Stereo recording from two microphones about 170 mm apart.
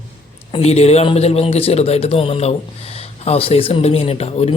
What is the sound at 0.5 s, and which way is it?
Speech, 40° left (ahead or behind).